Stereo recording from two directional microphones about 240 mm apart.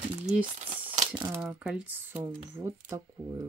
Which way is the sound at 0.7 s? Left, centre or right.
Right.